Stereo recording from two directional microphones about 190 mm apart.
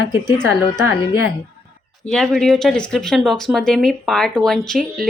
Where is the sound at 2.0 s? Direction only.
Centre (ahead or behind).